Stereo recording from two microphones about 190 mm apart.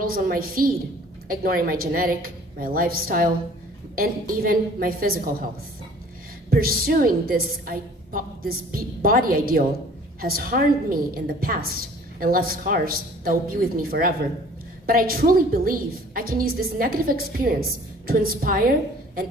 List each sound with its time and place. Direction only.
0.0 s a woman's voice: 50° right (ahead or behind)
6.5 s a woman's voice: 50° right (ahead or behind)